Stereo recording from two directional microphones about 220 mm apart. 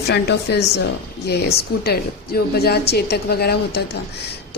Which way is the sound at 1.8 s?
45° left (ahead or behind).